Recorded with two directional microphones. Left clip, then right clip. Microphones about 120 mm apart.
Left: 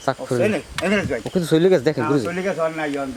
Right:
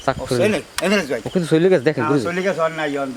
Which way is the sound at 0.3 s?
20° right (ahead or behind).